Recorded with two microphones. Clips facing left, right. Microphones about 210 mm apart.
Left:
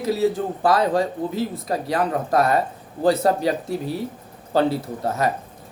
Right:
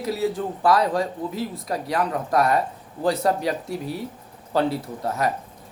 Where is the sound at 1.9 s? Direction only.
25° left (ahead or behind).